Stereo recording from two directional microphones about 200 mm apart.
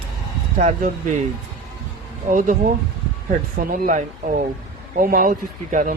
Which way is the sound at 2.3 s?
40° right (ahead or behind).